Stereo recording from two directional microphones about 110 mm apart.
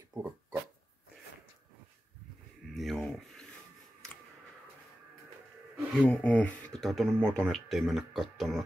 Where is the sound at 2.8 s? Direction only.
5° left (ahead or behind).